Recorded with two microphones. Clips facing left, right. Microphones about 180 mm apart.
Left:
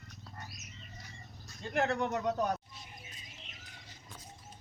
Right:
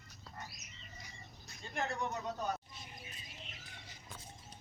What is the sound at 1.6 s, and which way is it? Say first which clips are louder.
Speech: left 7 dB; 70° left (ahead or behind).